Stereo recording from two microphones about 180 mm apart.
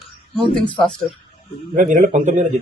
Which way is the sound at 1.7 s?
45° right (ahead or behind).